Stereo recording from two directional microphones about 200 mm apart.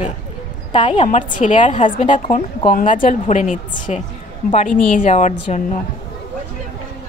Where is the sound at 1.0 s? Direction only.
40° left (ahead or behind).